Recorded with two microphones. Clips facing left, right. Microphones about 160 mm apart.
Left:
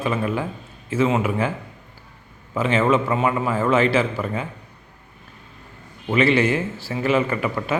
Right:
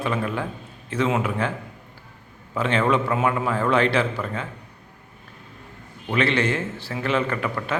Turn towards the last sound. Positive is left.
turn(degrees=10)  # may be behind; listen again after turning